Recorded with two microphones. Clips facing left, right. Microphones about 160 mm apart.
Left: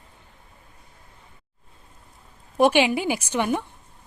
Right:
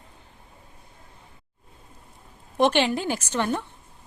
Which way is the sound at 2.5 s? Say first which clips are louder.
Left 2 dB; 10° left (ahead or behind).